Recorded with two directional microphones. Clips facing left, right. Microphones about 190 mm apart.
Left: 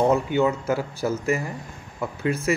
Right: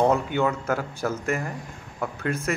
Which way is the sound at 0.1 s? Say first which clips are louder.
Left 2 dB; 10° left (ahead or behind).